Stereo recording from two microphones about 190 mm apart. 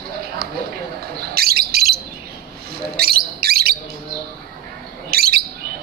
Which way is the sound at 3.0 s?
55° right (ahead or behind).